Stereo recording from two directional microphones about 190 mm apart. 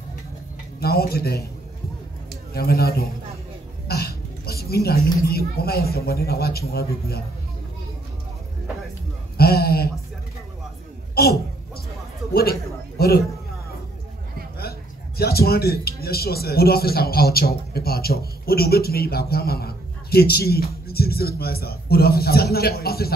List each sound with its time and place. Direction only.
0.7 s a woman's voice: 55° left (ahead or behind)
2.5 s a man's voice: 55° left (ahead or behind)
3.8 s cough: 55° left (ahead or behind)
4.6 s a woman's voice: 55° left (ahead or behind)
9.4 s speech: 55° left (ahead or behind)
11.1 s a sound: 55° left (ahead or behind)
14.6 s speech: 55° left (ahead or behind)